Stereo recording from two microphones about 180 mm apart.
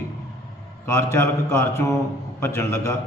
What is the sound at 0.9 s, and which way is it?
A man's voice, 15° left (ahead or behind).